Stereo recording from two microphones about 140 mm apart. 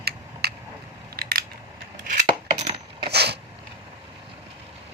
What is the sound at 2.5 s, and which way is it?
Coin, 50° right (ahead or behind).